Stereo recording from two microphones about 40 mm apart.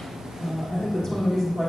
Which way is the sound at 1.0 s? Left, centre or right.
Centre.